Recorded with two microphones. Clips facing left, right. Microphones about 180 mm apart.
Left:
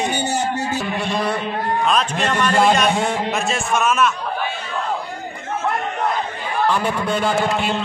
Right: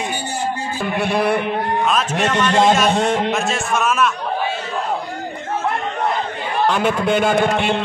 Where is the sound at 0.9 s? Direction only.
60° right (ahead or behind).